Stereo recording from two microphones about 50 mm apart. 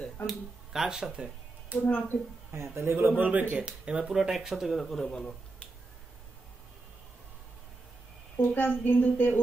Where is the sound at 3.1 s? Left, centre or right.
Right.